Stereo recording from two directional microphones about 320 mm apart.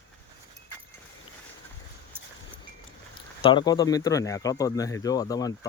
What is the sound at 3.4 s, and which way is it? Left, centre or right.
Speech, centre.